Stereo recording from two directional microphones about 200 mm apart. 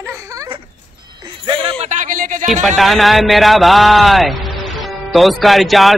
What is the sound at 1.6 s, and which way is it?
Speech, 35° right (ahead or behind).